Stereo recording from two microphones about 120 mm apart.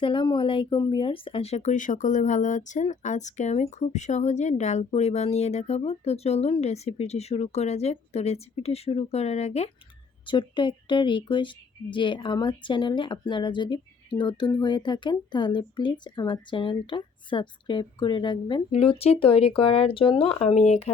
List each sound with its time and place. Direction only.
0.0 s speech: 45° left (ahead or behind); by 9.6 s 65° left (ahead or behind)
10.2 s a woman's voice: 45° left (ahead or behind)
18.7 s speech: 55° left (ahead or behind)